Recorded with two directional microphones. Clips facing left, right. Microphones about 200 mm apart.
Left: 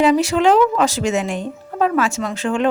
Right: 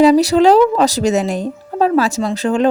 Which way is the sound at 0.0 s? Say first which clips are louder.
Right 5 dB; 35° right (ahead or behind).